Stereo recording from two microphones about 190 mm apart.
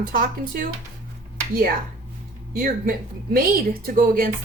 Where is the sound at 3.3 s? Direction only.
50° right (ahead or behind).